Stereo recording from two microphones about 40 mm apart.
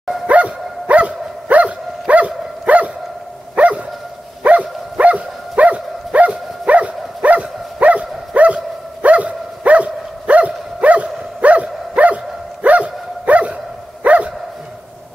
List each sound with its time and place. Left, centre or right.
0.3 s dog: right